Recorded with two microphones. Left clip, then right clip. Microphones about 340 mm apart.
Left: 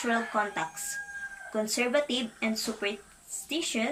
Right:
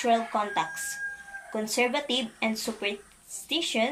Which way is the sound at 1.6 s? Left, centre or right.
Centre.